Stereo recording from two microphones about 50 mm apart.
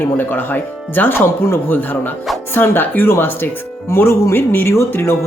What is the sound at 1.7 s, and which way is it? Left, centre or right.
Speech, left.